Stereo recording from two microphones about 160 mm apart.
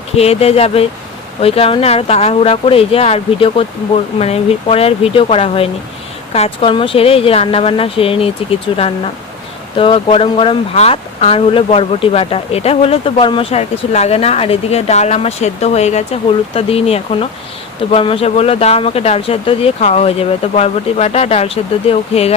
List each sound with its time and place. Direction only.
0.2 s speech: 40° left (ahead or behind)